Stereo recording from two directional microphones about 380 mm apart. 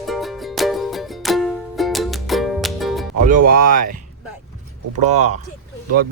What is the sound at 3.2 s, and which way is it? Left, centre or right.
Speech, right.